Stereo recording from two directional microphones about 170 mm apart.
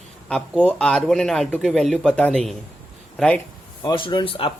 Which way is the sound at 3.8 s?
25° left (ahead or behind).